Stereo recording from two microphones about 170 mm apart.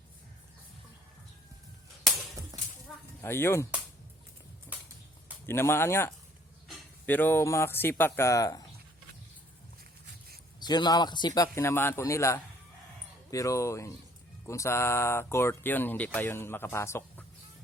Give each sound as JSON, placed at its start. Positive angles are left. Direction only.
{"t": 2.5, "sound": "a sound", "side_deg": -20}
{"t": 3.2, "sound": "speech", "side_deg": 15}
{"t": 4.7, "sound": "a sound", "side_deg": -10}
{"t": 5.5, "sound": "speech", "side_deg": 15}
{"t": 10.6, "sound": "speech", "side_deg": 25}
{"t": 11.5, "sound": "speech", "side_deg": 15}